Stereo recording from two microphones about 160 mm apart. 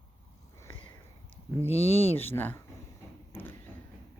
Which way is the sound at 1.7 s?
40° left (ahead or behind).